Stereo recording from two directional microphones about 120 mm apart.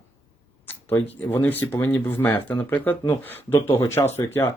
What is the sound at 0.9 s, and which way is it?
Speech, 15° left (ahead or behind).